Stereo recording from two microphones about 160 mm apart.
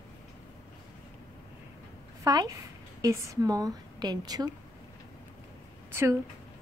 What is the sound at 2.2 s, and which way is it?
A woman's voice, 20° right (ahead or behind).